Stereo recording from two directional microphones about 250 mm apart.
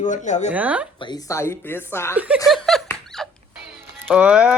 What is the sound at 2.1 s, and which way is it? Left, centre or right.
Speech, centre.